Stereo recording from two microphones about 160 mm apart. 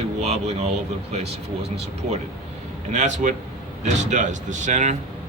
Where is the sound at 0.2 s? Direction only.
40° right (ahead or behind).